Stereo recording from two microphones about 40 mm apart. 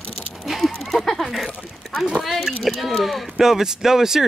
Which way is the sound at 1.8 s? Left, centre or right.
Centre.